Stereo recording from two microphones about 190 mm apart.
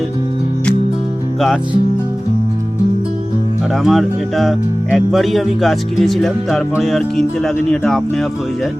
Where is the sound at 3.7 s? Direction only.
Centre (ahead or behind).